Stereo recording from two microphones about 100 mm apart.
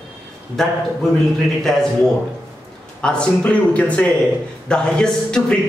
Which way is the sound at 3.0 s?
10° left (ahead or behind).